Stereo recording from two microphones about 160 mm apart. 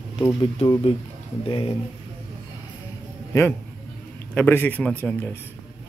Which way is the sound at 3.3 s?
20° left (ahead or behind).